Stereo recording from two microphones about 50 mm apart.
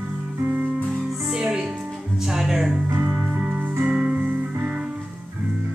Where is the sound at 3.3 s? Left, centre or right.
Right.